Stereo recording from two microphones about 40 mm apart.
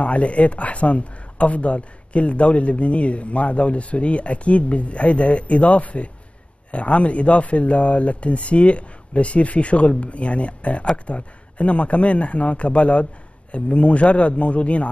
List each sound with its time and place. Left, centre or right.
0.0 s speech: left